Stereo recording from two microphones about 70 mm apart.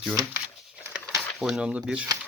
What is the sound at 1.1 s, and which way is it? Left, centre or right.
Speech, centre.